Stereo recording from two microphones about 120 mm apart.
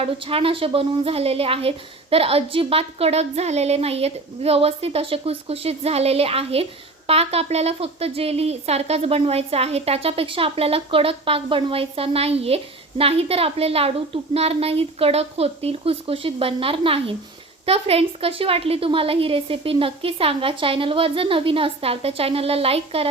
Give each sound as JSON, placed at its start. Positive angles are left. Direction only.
{"t": 0.0, "sound": "a woman's voice", "side_deg": -50}